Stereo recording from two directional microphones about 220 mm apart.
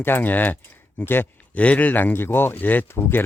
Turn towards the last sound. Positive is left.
turn(degrees=10)  # may be behind; listen again after turning